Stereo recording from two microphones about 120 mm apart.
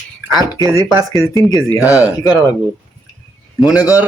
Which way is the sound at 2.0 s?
30° left (ahead or behind).